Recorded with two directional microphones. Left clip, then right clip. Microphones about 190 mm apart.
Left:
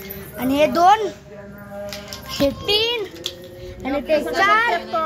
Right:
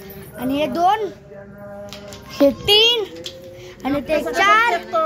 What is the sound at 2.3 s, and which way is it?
Speech, 55° right (ahead or behind).